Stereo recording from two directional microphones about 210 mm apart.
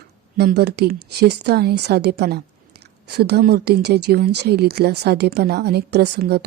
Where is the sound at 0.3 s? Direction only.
50° right (ahead or behind).